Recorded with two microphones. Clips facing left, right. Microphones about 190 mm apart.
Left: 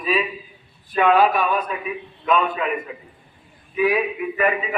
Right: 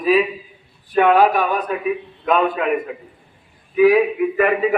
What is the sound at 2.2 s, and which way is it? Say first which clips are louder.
Speech: right 3 dB; 55° right (ahead or behind).